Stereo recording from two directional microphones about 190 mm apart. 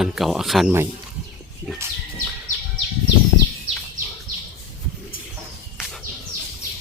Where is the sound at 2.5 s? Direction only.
40° left (ahead or behind).